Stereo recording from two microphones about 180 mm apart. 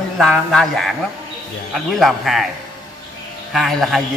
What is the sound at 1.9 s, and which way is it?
Speech, centre (ahead or behind).